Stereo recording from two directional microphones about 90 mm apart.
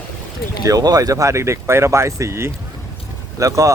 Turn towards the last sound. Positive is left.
turn(degrees=-35)  # may be behind; listen again after turning